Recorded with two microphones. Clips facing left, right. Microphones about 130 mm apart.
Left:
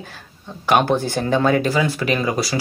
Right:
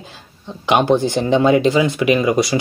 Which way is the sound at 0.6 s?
15° right (ahead or behind).